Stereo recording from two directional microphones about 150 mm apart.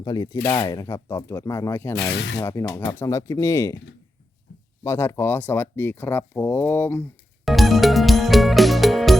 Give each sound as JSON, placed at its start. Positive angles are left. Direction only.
{"t": 0.0, "sound": "speech", "side_deg": 25}
{"t": 4.8, "sound": "speech", "side_deg": 15}
{"t": 7.4, "sound": "music", "side_deg": 0}